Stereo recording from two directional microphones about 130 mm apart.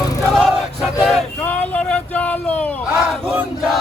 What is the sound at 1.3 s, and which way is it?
Vehicle, 10° left (ahead or behind).